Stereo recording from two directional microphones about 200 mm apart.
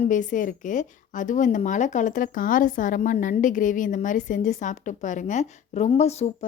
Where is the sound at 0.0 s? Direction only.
40° left (ahead or behind).